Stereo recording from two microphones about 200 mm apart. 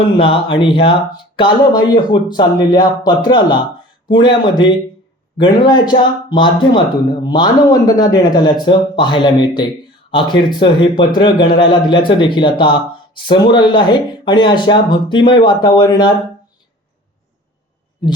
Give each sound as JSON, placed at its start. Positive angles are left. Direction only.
{"t": 0.2, "sound": "speech", "side_deg": 25}